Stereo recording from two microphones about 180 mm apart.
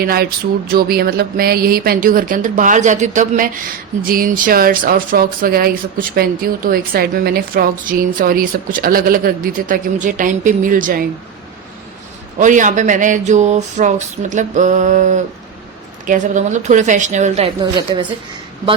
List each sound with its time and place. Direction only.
0.0 s a sound: 55° right (ahead or behind)
0.7 s speech: 60° right (ahead or behind)
12.4 s speech: 45° right (ahead or behind)
17.6 s a woman's voice: 25° right (ahead or behind)